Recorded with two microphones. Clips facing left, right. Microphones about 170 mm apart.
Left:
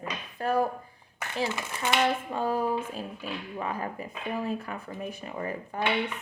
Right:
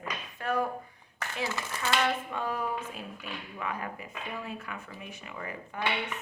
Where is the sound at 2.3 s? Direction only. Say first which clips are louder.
Left 5 dB; 35° left (ahead or behind).